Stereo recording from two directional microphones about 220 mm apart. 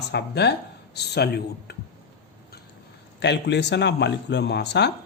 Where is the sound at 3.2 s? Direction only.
50° left (ahead or behind).